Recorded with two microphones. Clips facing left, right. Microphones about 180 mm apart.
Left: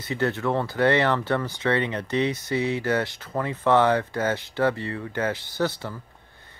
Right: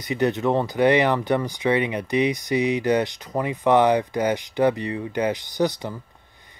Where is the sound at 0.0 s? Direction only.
15° right (ahead or behind).